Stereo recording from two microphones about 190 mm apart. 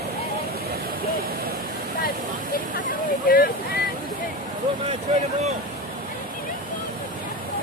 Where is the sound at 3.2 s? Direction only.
50° left (ahead or behind).